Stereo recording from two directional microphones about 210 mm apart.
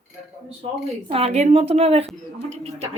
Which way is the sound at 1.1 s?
30° right (ahead or behind).